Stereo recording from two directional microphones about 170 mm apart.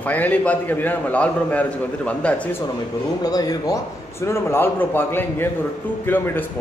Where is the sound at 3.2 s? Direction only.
20° left (ahead or behind).